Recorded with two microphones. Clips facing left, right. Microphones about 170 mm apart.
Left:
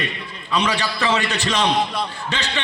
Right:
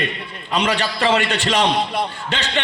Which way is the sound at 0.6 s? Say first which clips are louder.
Right 5 dB; 55° right (ahead or behind).